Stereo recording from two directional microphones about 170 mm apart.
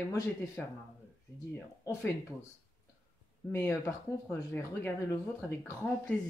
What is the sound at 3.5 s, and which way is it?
Speech, 15° left (ahead or behind).